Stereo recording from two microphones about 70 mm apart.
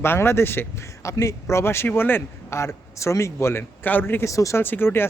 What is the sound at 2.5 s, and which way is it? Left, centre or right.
Speech, left.